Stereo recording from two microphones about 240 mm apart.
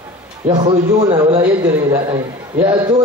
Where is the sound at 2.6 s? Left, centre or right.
Centre.